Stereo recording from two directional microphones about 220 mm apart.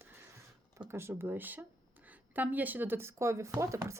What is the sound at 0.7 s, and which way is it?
A woman's voice, 10° right (ahead or behind).